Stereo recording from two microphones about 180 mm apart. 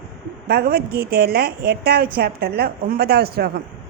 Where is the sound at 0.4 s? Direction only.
60° right (ahead or behind).